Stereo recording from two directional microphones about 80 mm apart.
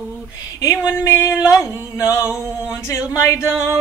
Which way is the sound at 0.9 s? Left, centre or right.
Left.